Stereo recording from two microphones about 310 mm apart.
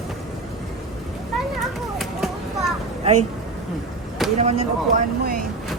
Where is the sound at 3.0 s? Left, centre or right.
Right.